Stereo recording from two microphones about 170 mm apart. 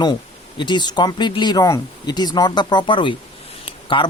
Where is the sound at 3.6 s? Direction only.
30° left (ahead or behind).